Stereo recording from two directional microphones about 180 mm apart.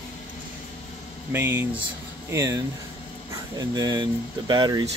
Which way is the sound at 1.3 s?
10° right (ahead or behind).